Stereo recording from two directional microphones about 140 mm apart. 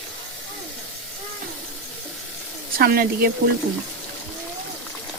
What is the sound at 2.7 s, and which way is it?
Speech, 90° right.